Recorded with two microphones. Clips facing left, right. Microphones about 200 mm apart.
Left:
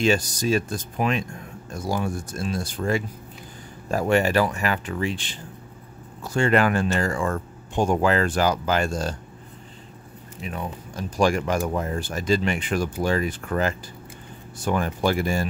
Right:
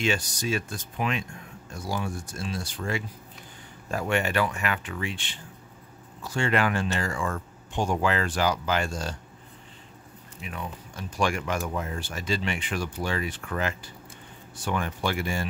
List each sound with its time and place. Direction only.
0.0 s speech: 40° left (ahead or behind)
10.4 s speech: 35° left (ahead or behind)